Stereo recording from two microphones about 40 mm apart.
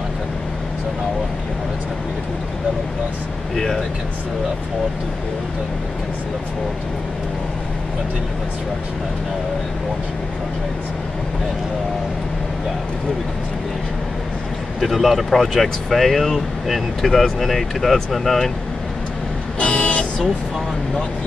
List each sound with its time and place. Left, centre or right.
3.5 s speech: centre
14.8 s speech: centre
19.6 s vehicle: left